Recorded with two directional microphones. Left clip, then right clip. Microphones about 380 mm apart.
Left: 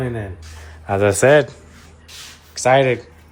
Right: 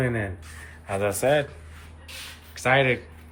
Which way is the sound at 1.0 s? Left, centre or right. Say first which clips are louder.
Left 10 dB; left.